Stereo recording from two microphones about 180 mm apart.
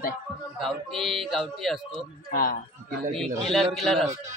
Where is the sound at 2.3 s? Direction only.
55° left (ahead or behind).